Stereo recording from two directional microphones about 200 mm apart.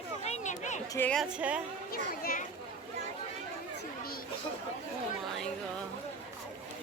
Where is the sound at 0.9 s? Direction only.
10° left (ahead or behind).